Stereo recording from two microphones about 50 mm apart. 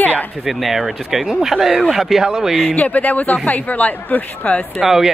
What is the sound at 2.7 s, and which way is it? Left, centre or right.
Speech, left.